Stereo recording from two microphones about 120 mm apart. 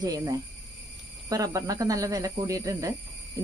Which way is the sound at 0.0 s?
35° right (ahead or behind).